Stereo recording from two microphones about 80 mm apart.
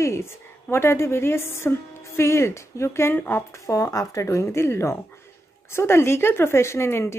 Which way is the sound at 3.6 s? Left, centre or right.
Left.